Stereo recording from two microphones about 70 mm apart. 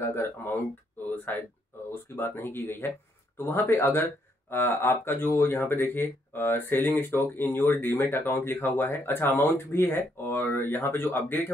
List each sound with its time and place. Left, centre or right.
0.0 s speech: left
1.0 s a sound: left
1.9 s speech: left